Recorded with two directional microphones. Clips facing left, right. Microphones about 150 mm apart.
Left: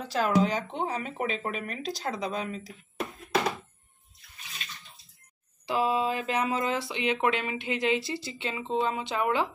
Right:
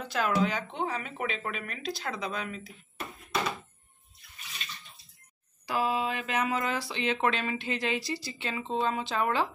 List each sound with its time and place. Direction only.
0.1 s speech: 35° left (ahead or behind)
5.7 s speech: 25° left (ahead or behind)